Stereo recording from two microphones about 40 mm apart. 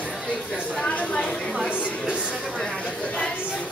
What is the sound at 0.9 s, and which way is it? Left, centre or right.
Speech, left.